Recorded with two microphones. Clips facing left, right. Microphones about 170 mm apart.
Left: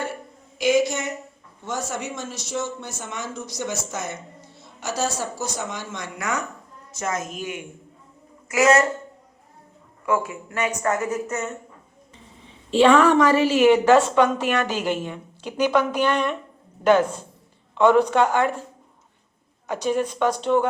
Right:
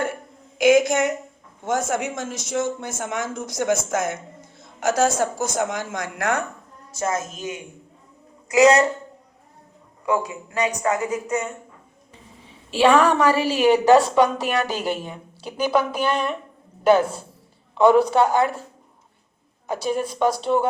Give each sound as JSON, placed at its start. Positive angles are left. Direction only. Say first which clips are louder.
{"t": 0.6, "sound": "speech", "louder": "right 4 dB", "side_deg": -50}
{"t": 7.0, "sound": "a woman's voice", "louder": "right 2 dB", "side_deg": -30}
{"t": 10.1, "sound": "a woman's voice", "louder": "even", "side_deg": -15}
{"t": 12.7, "sound": "a woman's voice", "louder": "left 1 dB", "side_deg": -10}
{"t": 19.7, "sound": "a woman's voice", "louder": "left 1 dB", "side_deg": -10}